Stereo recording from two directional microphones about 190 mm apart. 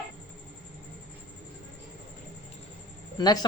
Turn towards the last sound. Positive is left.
turn(degrees=20)  # may be behind; listen again after turning